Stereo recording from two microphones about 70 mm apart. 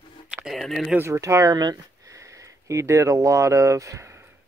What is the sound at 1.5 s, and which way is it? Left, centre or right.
Speech, right.